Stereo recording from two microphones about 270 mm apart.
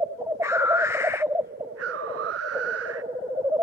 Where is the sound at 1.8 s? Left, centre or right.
Right.